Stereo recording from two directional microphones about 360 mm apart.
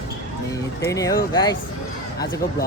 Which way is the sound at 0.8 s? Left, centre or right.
Centre.